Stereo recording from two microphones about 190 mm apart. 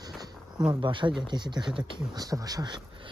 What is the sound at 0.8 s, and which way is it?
Speech, 25° right (ahead or behind).